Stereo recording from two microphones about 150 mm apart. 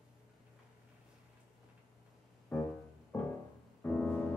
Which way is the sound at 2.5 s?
15° left (ahead or behind).